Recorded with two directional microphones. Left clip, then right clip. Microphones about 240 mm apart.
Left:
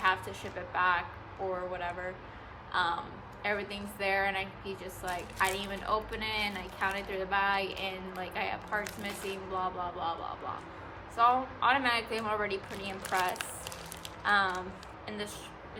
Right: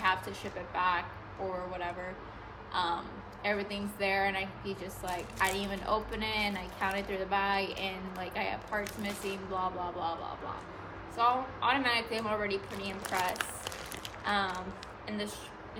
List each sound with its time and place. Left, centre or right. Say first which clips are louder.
0.0 s a woman's voice: left 1 dB; centre
2.7 s a woman's voice: left 2 dB; centre
13.0 s speech: left 2 dB; right
13.3 s a sound: right 2 dB; right
14.3 s a woman's voice: left 4 dB; centre